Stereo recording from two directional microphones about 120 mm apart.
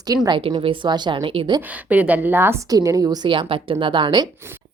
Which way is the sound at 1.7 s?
10° right (ahead or behind).